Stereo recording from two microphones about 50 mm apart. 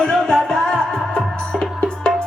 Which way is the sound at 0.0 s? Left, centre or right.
Centre.